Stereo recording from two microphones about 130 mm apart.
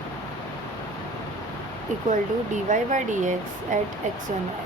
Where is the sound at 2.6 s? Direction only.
70° right (ahead or behind).